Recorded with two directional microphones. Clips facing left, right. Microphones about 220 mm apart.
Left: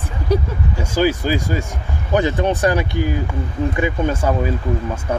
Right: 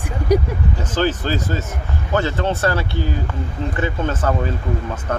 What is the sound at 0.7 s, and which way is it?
Speech, 10° left (ahead or behind).